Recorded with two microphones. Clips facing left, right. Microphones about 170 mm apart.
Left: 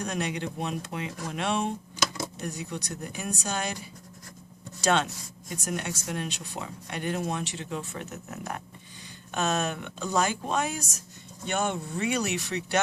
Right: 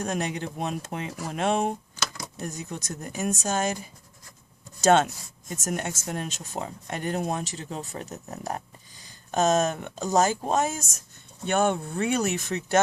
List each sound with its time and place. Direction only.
0.0 s speech: 45° right (ahead or behind)
2.0 s a sound: 15° left (ahead or behind)
2.4 s speech: 45° right (ahead or behind)
4.8 s speech: 45° right (ahead or behind)